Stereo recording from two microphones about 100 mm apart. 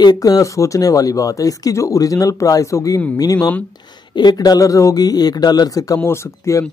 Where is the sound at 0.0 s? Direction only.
40° left (ahead or behind).